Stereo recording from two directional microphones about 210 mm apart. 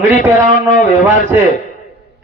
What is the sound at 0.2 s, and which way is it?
Speech, 40° left (ahead or behind).